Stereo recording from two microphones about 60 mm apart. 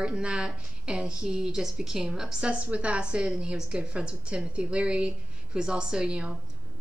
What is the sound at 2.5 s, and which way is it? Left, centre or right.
A woman's voice, right.